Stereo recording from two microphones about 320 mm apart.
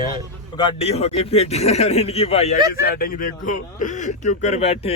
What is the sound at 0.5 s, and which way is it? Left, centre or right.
Speech, centre.